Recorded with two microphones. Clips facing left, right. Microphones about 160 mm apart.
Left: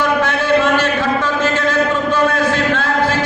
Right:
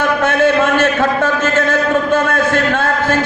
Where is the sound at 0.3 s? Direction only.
50° right (ahead or behind).